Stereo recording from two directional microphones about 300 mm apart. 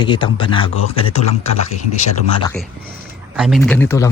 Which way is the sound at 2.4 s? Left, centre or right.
Centre.